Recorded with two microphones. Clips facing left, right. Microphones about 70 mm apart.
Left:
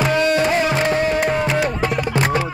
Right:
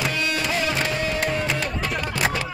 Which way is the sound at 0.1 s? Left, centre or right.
Left.